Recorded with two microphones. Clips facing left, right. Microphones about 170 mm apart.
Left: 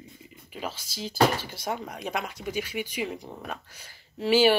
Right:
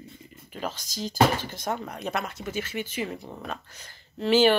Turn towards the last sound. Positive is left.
turn(degrees=10)  # may be behind; listen again after turning